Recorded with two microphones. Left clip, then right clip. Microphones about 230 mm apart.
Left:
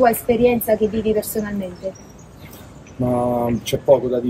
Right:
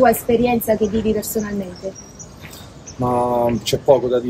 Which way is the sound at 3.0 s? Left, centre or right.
Centre.